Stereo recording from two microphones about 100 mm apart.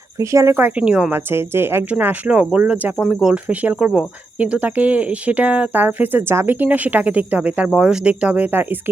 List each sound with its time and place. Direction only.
0.2 s speech: 30° right (ahead or behind); by 1.1 s 10° right (ahead or behind)
1.1 s speech: 25° right (ahead or behind)
3.0 s speech: 5° right (ahead or behind); by 8.8 s 20° right (ahead or behind)